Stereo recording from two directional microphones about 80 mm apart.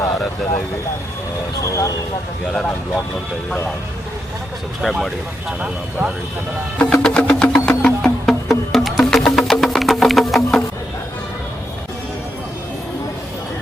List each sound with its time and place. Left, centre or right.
1.6 s speech: left
2.5 s speech: centre
4.8 s speech: centre
5.5 s speech: centre
6.7 s music: centre
8.0 s music: centre